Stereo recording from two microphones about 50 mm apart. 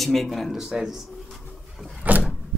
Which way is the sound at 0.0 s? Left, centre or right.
Centre.